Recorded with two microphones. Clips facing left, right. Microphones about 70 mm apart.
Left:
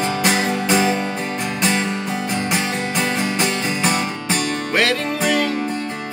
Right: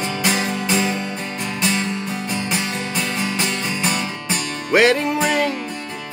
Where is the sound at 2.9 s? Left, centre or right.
Left.